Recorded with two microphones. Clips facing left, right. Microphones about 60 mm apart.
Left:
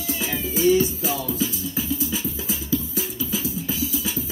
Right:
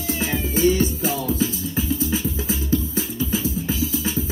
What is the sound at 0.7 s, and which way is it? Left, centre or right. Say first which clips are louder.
Music: left 1 dB; right.